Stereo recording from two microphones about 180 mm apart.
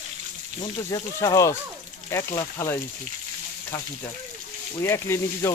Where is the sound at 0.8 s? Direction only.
15° left (ahead or behind).